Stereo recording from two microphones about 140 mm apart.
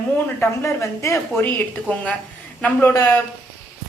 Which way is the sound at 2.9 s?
25° left (ahead or behind).